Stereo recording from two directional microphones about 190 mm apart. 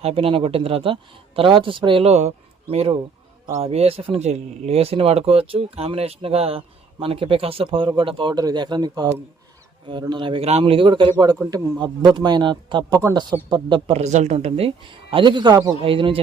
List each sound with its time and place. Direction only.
0.0 s speech: 30° right (ahead or behind)